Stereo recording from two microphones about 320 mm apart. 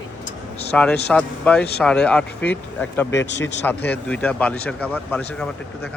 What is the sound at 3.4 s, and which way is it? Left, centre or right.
Speech, centre.